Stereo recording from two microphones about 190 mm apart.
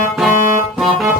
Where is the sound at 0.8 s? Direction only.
Centre (ahead or behind).